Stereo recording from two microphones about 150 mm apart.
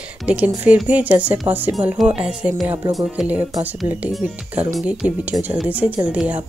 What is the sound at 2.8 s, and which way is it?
Speech, 25° right (ahead or behind).